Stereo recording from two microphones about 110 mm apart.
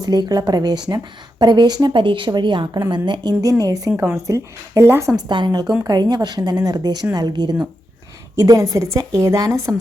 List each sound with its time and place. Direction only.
0.0 s a woman's voice: 35° right (ahead or behind)
3.4 s a woman's voice: 30° right (ahead or behind)
5.3 s a woman's voice: 40° right (ahead or behind)